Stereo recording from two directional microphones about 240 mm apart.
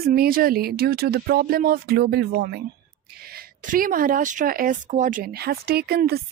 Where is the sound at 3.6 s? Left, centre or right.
Right.